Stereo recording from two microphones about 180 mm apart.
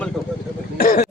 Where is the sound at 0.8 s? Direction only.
55° left (ahead or behind).